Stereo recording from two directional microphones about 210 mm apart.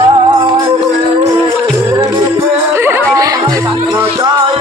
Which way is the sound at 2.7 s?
10° right (ahead or behind).